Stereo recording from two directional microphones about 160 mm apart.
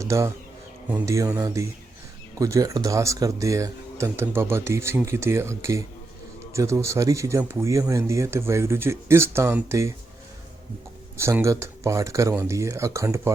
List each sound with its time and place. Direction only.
0.0 s speech: 20° right (ahead or behind)
11.2 s speech: 15° right (ahead or behind)